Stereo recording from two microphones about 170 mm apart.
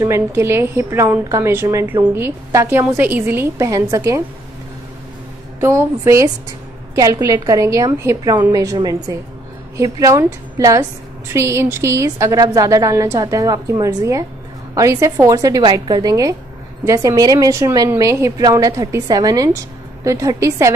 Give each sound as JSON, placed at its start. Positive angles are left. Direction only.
{"t": 0.0, "sound": "a woman's voice", "side_deg": -15}
{"t": 5.6, "sound": "a woman's voice", "side_deg": -15}